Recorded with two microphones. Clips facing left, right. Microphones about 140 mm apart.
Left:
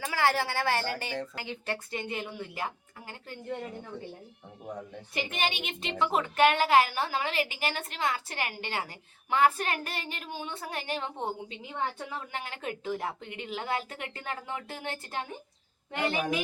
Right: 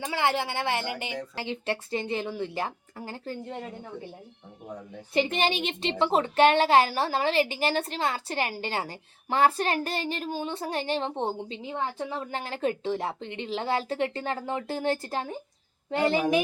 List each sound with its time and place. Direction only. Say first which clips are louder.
0.0 s a woman's voice: right 1 dB; 20° right (ahead or behind)
5.1 s a woman's voice: right 7 dB; 30° right (ahead or behind)